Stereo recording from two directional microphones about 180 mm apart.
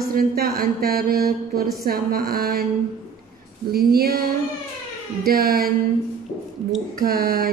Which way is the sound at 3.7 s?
55° right (ahead or behind).